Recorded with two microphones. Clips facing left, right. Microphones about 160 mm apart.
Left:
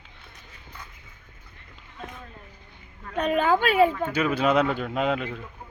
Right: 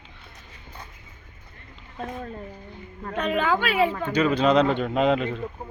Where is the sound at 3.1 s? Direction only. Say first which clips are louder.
Left 2 dB; 40° left (ahead or behind).